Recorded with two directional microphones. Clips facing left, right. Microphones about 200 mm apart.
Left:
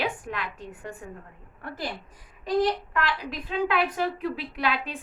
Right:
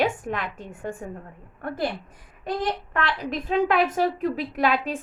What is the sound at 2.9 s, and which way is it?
A woman's voice, 45° right (ahead or behind).